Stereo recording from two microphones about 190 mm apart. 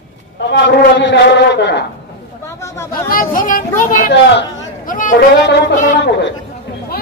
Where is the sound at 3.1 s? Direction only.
50° left (ahead or behind).